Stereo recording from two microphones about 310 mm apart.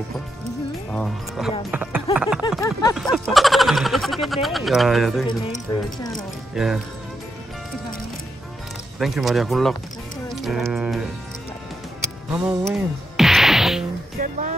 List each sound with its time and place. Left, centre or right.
0.9 s speech: centre
2.1 s a sound: centre
2.6 s a sound: centre
3.0 s speech: centre
6.5 s speech: centre
9.0 s speech: centre
10.3 s music: centre
12.3 s speech: centre
12.7 s music: centre
14.1 s music: right